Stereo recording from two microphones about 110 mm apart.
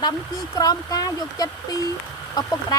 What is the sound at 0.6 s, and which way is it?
Speech, 35° left (ahead or behind).